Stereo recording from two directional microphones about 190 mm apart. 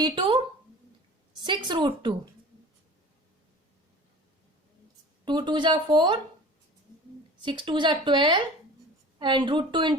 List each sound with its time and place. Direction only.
0.0 s a woman's voice: 25° right (ahead or behind)
5.2 s speech: 25° right (ahead or behind)
7.4 s speech: 25° right (ahead or behind)